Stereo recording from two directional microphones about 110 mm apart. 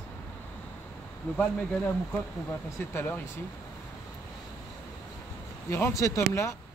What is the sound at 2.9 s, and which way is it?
Speech, 15° left (ahead or behind).